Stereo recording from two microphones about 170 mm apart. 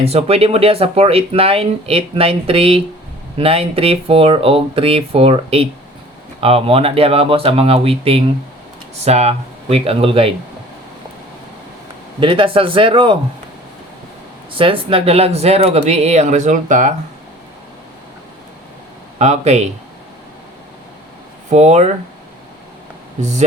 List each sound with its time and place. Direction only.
0.0 s speech: 35° right (ahead or behind)
12.2 s speech: 30° right (ahead or behind)
14.5 s speech: 30° right (ahead or behind); by 16.9 s 50° right (ahead or behind)
19.2 s speech: 40° right (ahead or behind)
21.5 s speech: 40° right (ahead or behind)
23.2 s speech: 45° right (ahead or behind)